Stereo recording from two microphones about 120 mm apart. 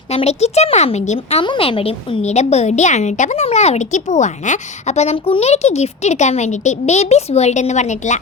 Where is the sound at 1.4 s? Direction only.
45° left (ahead or behind).